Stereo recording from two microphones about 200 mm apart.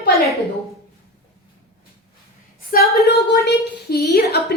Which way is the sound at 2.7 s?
45° left (ahead or behind).